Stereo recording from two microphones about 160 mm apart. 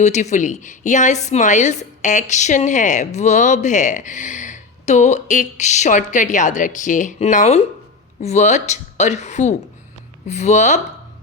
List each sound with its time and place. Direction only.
0.0 s a woman's voice: 45° left (ahead or behind)